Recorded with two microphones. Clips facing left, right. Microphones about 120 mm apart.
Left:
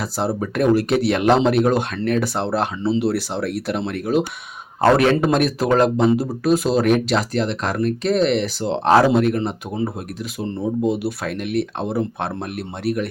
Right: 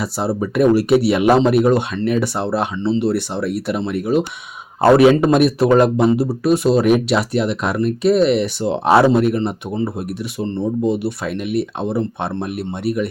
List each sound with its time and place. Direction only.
0.0 s a man's voice: 5° right (ahead or behind)